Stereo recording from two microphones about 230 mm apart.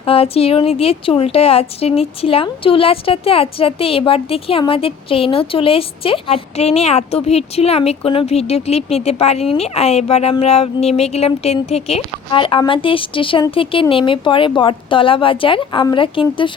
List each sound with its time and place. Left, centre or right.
0.0 s speech: left